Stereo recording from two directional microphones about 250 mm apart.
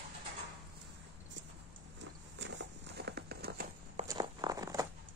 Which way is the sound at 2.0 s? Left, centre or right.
Right.